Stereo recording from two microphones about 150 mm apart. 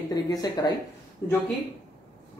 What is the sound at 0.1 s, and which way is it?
Speech, 25° left (ahead or behind).